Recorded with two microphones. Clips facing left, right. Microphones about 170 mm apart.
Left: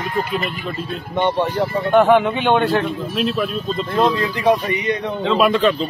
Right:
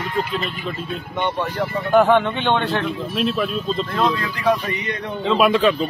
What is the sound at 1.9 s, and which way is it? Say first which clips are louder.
Speech: left 1 dB; centre (ahead or behind).